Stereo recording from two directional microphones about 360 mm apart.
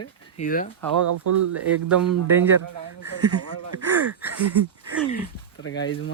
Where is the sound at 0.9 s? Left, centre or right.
Right.